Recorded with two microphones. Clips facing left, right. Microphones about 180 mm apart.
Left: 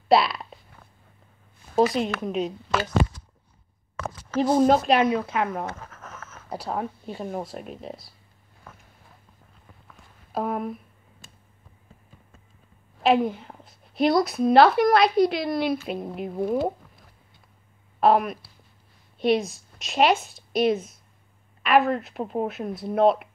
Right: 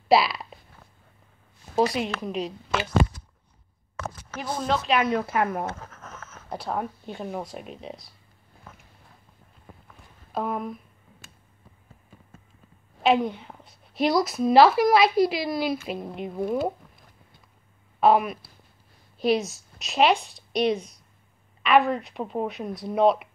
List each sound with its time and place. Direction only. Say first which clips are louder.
0.1 s a sound: left 1 dB; centre (ahead or behind)
1.8 s a woman's voice: left 2 dB; centre (ahead or behind)
4.5 s speech: left 6 dB; 45° left (ahead or behind)
5.2 s speech: right 1 dB; 5° right (ahead or behind)
6.7 s a woman's voice: even; centre (ahead or behind)
10.3 s a sound: left 1 dB; 5° left (ahead or behind)
13.0 s a woman's voice: left 1 dB; centre (ahead or behind)
18.0 s a woman's voice: even; centre (ahead or behind)